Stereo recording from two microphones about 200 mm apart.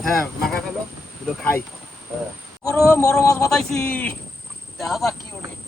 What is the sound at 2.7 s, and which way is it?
Speech, 15° left (ahead or behind).